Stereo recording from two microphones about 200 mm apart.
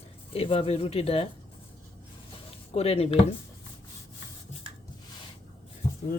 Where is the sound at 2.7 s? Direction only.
30° left (ahead or behind).